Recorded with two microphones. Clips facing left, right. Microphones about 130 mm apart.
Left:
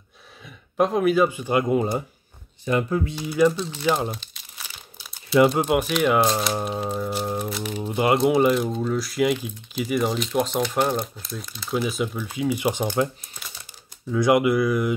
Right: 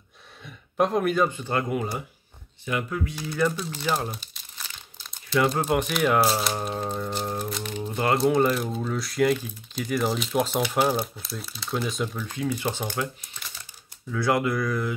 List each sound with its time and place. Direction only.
0.4 s speech: centre (ahead or behind)
1.7 s speech: 25° left (ahead or behind)
2.6 s speech: 35° left (ahead or behind)
3.3 s speech: 5° left (ahead or behind)
3.5 s speech: 5° right (ahead or behind)
4.3 s crumpling: 5° left (ahead or behind)
5.5 s speech: 5° left (ahead or behind)
14.1 s speech: 15° left (ahead or behind)